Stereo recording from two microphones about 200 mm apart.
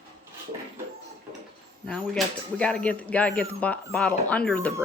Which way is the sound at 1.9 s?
5° left (ahead or behind).